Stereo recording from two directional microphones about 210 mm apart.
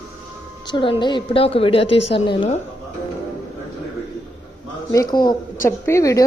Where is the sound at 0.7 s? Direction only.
25° left (ahead or behind).